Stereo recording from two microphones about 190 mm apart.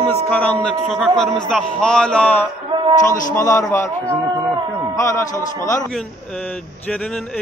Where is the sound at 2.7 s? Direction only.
25° right (ahead or behind).